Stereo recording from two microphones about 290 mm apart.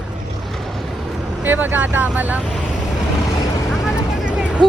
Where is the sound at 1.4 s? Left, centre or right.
Centre.